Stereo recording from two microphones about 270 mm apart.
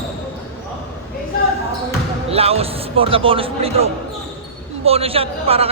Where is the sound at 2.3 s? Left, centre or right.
Right.